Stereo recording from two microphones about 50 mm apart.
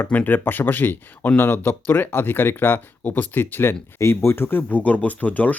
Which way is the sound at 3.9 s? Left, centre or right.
Left.